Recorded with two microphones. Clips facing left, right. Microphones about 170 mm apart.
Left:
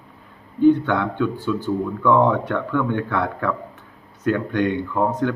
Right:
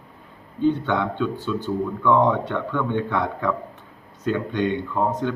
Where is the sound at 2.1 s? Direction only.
15° right (ahead or behind).